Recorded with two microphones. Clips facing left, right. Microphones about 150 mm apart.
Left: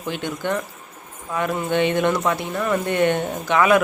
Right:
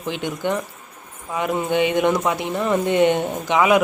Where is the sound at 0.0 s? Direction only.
15° right (ahead or behind).